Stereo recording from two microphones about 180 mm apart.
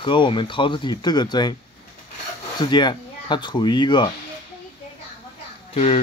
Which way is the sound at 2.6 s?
25° left (ahead or behind).